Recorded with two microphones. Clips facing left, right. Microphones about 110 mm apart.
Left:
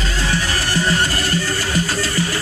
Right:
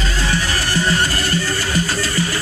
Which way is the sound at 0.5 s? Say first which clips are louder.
Even; 45° left (ahead or behind).